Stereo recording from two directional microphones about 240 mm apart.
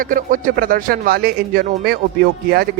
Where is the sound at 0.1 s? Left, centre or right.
Right.